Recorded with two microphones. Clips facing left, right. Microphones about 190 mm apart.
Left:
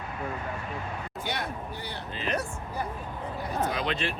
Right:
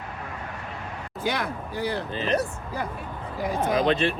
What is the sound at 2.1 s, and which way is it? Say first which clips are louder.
Speech: right 4 dB; 40° right (ahead or behind).